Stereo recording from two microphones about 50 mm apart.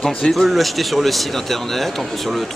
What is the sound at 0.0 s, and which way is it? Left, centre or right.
Speech, centre.